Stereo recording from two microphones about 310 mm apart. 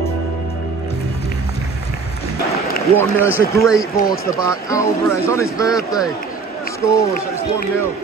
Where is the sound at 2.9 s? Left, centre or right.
Centre.